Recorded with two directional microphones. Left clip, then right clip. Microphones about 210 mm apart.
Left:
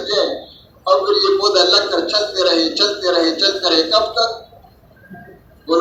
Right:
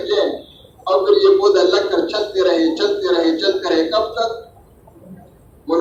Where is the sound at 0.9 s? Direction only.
25° left (ahead or behind).